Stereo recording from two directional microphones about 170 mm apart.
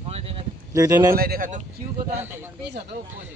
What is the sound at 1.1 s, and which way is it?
Speech, 60° right (ahead or behind).